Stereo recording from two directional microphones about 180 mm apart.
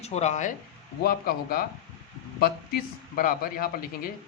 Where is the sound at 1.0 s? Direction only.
55° left (ahead or behind).